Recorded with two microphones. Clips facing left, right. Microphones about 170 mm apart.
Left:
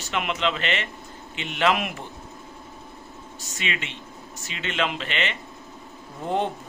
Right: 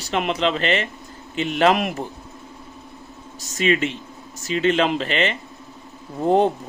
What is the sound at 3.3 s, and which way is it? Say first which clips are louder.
Speech: right 12 dB; 40° right (ahead or behind).